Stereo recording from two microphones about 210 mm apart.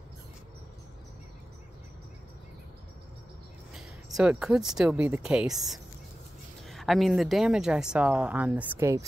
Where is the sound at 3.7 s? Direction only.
5° right (ahead or behind).